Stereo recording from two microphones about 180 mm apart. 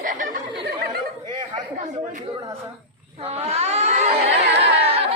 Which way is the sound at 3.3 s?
35° right (ahead or behind).